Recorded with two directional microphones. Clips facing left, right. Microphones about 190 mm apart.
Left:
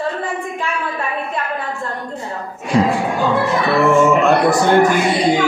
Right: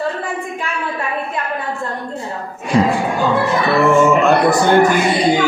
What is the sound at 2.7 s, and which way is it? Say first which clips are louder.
Speech: right 1 dB; centre (ahead or behind).